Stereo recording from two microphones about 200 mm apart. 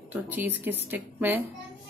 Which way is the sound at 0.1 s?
10° right (ahead or behind).